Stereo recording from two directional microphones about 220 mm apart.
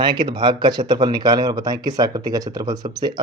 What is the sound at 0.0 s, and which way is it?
Speech, 20° right (ahead or behind).